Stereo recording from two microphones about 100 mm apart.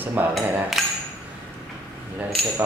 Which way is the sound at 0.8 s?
Centre (ahead or behind).